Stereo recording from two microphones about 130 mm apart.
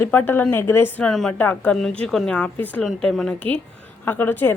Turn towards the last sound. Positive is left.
turn(degrees=15)  # may be behind; listen again after turning